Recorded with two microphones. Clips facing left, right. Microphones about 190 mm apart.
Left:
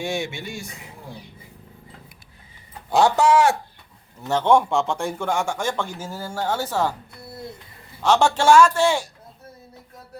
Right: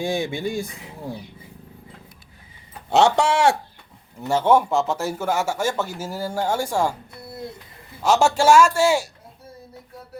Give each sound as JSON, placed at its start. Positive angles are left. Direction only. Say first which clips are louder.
{"t": 0.0, "sound": "speech", "louder": "right 3 dB", "side_deg": -30}
{"t": 2.9, "sound": "speech", "louder": "left 1 dB", "side_deg": -25}
{"t": 4.2, "sound": "speech", "louder": "even", "side_deg": -10}
{"t": 8.0, "sound": "speech", "louder": "even", "side_deg": -10}